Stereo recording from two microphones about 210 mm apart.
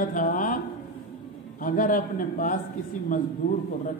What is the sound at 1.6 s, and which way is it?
Speech, 40° left (ahead or behind).